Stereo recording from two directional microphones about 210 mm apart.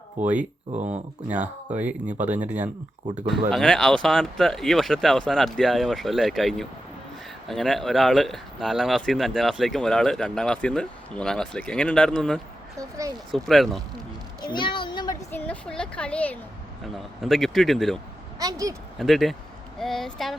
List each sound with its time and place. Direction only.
0.2 s speech: 5° right (ahead or behind)
0.7 s speech: 35° right (ahead or behind)
1.3 s speech: 5° right (ahead or behind)
3.5 s speech: 5° left (ahead or behind)
14.4 s a sound: 20° left (ahead or behind)
15.3 s a woman's voice: 5° left (ahead or behind)
18.3 s speech: 15° right (ahead or behind)
18.9 s speech: centre (ahead or behind)